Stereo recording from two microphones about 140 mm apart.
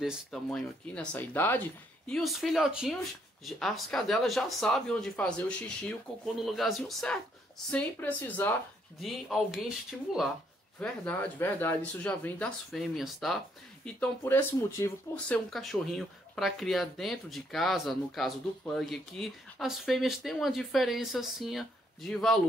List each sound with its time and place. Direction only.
0.0 s speech: centre (ahead or behind)
2.0 s speech: centre (ahead or behind)
9.0 s speech: centre (ahead or behind)
10.8 s speech: 10° left (ahead or behind)
13.9 s speech: 15° left (ahead or behind)